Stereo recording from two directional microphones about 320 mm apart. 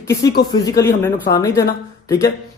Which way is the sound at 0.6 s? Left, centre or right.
Centre.